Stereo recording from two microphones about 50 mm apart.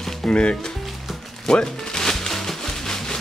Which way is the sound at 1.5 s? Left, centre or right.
Centre.